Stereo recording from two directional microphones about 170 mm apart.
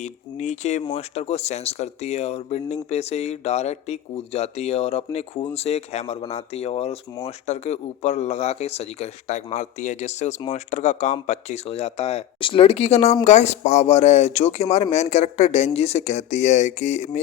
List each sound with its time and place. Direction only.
0.0 s speech: 45° left (ahead or behind)